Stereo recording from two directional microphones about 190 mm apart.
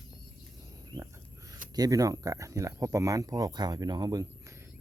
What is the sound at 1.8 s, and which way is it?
Speech, 20° right (ahead or behind).